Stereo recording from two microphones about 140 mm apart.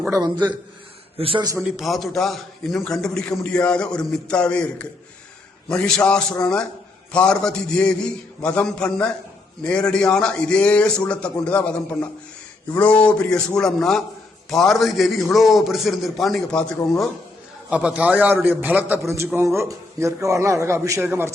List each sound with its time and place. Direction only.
0.1 s a man's voice: 30° right (ahead or behind)
1.6 s a man's voice: centre (ahead or behind)
17.7 s a man's voice: 10° right (ahead or behind)